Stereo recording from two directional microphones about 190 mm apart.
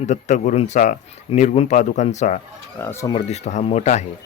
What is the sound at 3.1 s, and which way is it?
Speech, 35° left (ahead or behind).